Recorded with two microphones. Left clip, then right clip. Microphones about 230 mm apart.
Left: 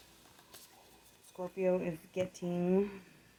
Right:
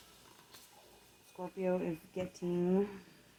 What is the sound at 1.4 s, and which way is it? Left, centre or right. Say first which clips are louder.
Speech: left 3 dB; left.